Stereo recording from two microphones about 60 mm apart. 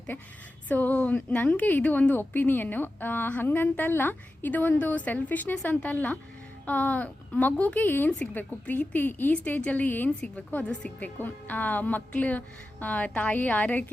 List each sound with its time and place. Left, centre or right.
0.7 s a woman's voice: left
10.1 s a woman's voice: centre